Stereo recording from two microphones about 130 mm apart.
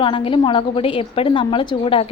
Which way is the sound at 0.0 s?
40° left (ahead or behind).